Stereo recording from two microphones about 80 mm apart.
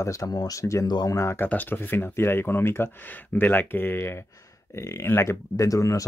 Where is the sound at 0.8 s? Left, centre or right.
Left.